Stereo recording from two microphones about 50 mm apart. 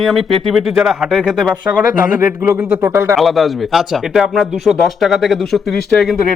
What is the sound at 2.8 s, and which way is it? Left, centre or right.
Speech, right.